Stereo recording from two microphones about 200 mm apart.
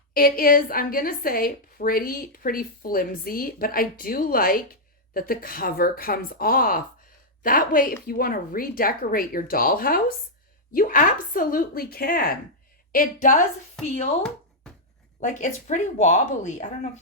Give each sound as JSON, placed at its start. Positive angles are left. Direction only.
{"t": 0.1, "sound": "a woman's voice", "side_deg": 45}
{"t": 14.2, "sound": "knock", "side_deg": 5}
{"t": 15.2, "sound": "speech", "side_deg": 40}